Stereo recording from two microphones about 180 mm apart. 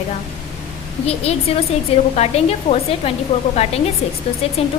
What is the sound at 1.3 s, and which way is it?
A woman's voice, 35° left (ahead or behind).